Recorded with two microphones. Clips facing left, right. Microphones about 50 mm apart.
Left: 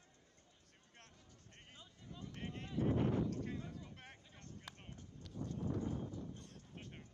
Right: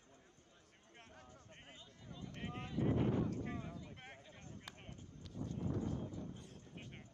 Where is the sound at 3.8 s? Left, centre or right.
Centre.